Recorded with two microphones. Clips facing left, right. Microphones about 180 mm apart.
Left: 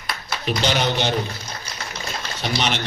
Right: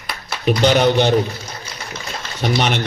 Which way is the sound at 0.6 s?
50° right (ahead or behind).